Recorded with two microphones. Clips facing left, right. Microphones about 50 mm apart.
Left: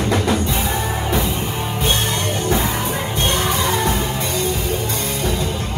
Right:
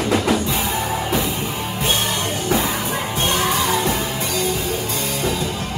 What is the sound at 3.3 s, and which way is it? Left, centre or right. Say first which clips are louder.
Music: right 1 dB; left.